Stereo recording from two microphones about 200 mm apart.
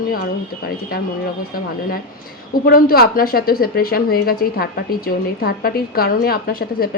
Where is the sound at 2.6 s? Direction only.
50° left (ahead or behind).